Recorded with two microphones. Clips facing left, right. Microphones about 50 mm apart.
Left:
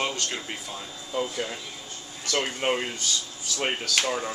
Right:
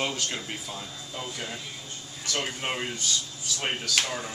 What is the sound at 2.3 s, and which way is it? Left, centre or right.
Speech, left.